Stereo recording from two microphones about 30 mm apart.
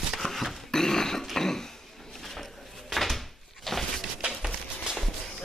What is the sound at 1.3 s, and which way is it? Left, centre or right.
Throat clearing, centre.